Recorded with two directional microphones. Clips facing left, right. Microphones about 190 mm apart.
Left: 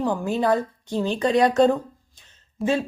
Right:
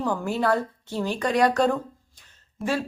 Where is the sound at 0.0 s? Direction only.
15° left (ahead or behind).